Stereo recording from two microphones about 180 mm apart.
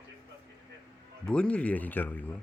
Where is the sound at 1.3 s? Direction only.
5° left (ahead or behind).